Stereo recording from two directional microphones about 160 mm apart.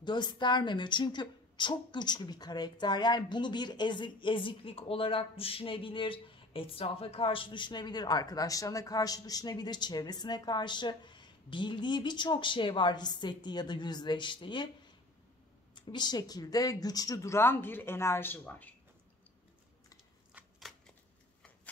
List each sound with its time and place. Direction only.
0.0 s a woman's voice: 30° left (ahead or behind)
15.7 s speech: 25° left (ahead or behind); by 18.8 s 10° left (ahead or behind)
20.3 s shuffling cards: centre (ahead or behind)